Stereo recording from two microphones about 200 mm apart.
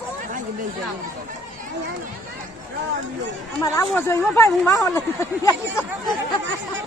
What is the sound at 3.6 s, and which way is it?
Speech, 15° left (ahead or behind).